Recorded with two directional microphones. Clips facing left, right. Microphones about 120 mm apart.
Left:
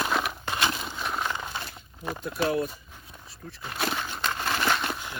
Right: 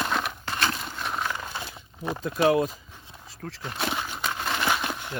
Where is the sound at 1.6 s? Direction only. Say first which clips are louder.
Right 2 dB; 20° right (ahead or behind).